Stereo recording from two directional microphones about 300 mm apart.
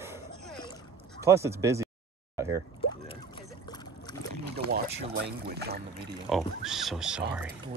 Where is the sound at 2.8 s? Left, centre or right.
Centre.